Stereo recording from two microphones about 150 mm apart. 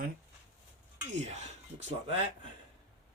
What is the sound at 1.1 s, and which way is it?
Speech, 50° right (ahead or behind).